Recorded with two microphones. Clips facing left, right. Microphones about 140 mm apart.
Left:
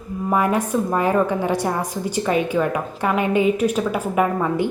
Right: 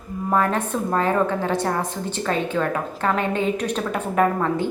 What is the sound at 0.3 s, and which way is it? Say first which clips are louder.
A woman's voice: left 2 dB; 10° left (ahead or behind).